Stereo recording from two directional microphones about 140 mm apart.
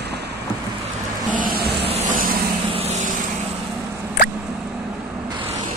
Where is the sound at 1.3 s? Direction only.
85° right.